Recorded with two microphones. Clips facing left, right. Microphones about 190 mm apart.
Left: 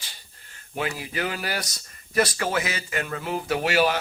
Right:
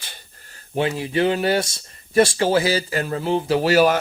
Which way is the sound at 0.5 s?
30° right (ahead or behind).